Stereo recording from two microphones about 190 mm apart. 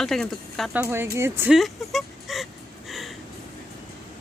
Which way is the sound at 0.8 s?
15° right (ahead or behind).